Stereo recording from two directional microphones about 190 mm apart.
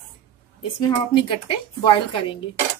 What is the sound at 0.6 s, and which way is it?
Speech, 25° left (ahead or behind).